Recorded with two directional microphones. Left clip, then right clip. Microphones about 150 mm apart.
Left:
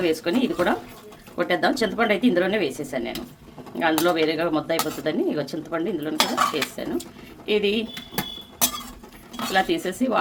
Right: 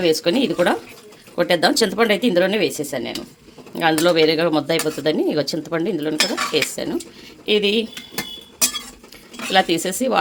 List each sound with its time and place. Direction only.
0.0 s speech: 45° right (ahead or behind)
9.5 s speech: 50° right (ahead or behind)